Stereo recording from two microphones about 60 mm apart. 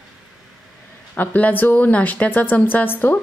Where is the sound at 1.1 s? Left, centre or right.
Left.